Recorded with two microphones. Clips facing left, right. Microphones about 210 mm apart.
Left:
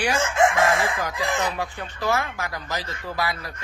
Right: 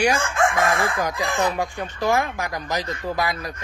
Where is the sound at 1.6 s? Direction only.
15° right (ahead or behind).